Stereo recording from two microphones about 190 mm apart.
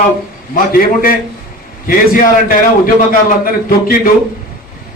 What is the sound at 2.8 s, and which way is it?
Speech, 50° left (ahead or behind).